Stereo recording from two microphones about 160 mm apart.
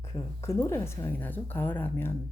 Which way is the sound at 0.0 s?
15° left (ahead or behind).